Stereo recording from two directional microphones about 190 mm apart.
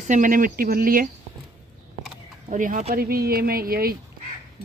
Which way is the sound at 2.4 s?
45° right (ahead or behind).